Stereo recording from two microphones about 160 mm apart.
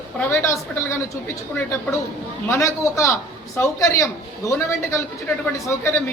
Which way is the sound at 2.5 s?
20° left (ahead or behind).